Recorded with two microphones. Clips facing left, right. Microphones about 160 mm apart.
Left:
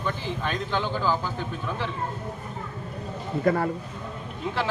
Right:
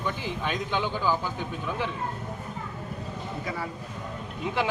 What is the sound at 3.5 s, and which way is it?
Speech, 55° left (ahead or behind).